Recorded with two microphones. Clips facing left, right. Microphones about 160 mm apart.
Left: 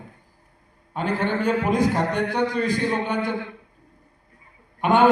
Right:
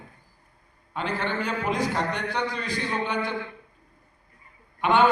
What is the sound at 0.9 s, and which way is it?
A man's voice, 45° left (ahead or behind).